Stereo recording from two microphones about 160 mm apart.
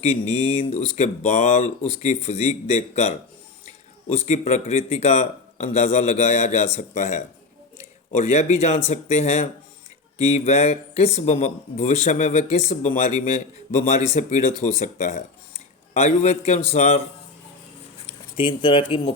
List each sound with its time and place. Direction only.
0.0 s speech: 40° left (ahead or behind)
4.3 s speech: 45° left (ahead or behind)
18.0 s speech: 30° left (ahead or behind)